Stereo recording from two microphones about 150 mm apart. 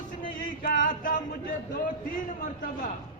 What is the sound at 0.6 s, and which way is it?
Speech, 65° left (ahead or behind).